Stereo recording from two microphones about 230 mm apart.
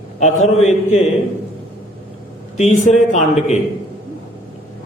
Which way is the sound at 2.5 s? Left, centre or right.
Left.